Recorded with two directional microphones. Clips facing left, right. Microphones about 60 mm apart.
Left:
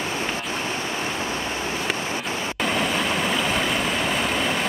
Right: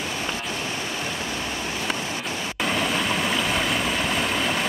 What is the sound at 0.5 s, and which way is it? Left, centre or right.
Vehicle, left.